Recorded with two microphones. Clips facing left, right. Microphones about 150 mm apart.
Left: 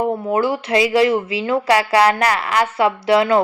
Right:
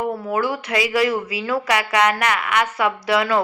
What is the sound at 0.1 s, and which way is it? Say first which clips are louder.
Speech: left 4 dB; 25° left (ahead or behind).